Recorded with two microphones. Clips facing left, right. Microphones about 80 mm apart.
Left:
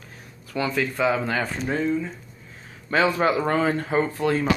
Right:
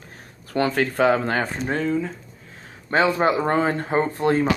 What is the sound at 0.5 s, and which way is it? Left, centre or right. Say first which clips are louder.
Speech: right 4 dB; right.